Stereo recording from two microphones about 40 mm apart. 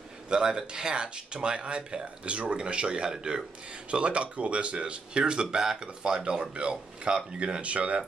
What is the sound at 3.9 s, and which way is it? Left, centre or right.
Speech, right.